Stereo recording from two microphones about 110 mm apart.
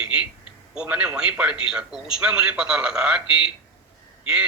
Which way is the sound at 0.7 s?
10° right (ahead or behind).